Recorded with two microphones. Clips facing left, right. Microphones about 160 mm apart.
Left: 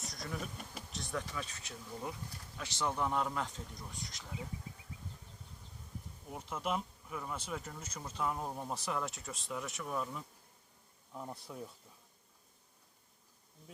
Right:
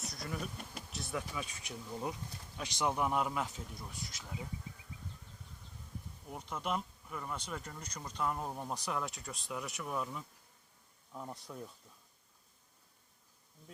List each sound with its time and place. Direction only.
0.0 s speech: centre (ahead or behind)
6.2 s speech: centre (ahead or behind)